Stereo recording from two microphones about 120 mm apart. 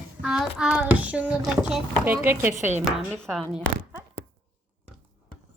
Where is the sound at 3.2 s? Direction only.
Centre (ahead or behind).